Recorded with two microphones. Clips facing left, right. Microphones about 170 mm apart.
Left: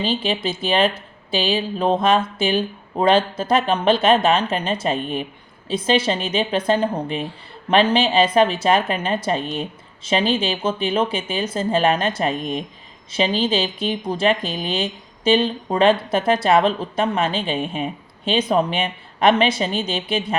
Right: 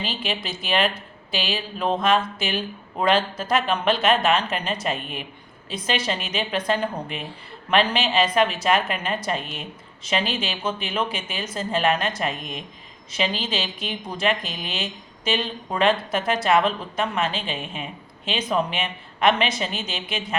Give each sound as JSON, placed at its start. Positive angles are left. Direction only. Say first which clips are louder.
{"t": 0.0, "sound": "speech", "louder": "left 7 dB", "side_deg": 30}